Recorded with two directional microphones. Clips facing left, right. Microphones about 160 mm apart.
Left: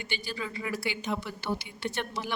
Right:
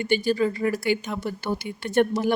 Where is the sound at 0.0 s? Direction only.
50° right (ahead or behind).